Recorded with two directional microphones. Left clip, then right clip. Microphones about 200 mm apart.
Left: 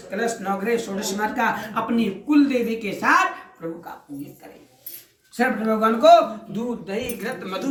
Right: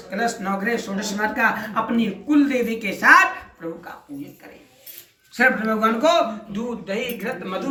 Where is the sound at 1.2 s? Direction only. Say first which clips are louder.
Right 2 dB; 5° left (ahead or behind).